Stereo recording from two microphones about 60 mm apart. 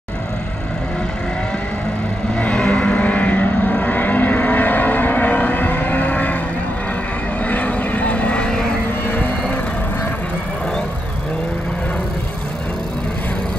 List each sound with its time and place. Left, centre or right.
2.3 s vehicle: centre
7.4 s vehicle: left
9.0 s vehicle: left